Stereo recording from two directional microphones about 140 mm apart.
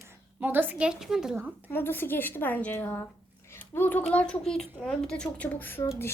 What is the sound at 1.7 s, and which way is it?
A woman's voice, 15° left (ahead or behind).